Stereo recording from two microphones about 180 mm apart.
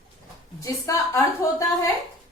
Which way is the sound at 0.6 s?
15° left (ahead or behind).